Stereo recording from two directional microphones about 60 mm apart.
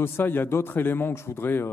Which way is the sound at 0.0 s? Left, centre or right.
Left.